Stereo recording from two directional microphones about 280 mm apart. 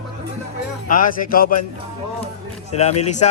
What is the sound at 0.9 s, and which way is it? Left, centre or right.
Speech, left.